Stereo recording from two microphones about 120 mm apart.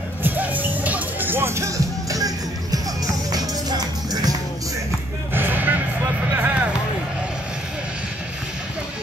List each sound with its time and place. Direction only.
0.2 s music: 15° right (ahead or behind); by 4.4 s 35° right (ahead or behind)
5.3 s music: 15° right (ahead or behind)
6.3 s a sound: 15° right (ahead or behind)